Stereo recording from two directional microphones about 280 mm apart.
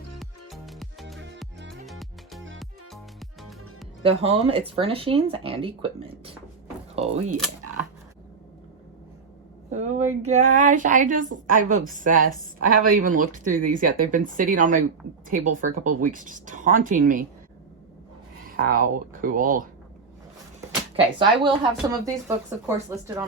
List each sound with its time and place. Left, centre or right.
0.2 s music: centre
4.0 s speech: right
9.6 s speech: right
18.4 s speech: right
20.9 s speech: centre